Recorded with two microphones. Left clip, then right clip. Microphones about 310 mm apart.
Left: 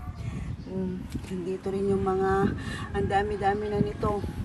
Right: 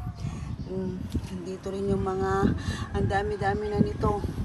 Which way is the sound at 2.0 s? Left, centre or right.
Centre.